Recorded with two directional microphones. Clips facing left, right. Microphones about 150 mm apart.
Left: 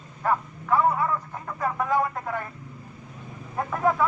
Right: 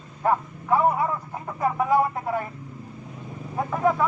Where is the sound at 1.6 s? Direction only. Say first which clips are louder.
Right 3 dB; 15° right (ahead or behind).